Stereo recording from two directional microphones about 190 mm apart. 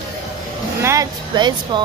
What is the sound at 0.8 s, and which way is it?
Speech, 15° right (ahead or behind).